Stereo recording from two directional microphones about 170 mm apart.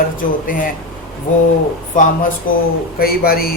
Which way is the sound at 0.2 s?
55° left (ahead or behind).